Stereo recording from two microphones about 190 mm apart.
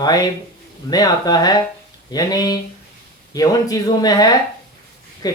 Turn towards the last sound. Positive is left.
turn(degrees=20)  # may be behind; listen again after turning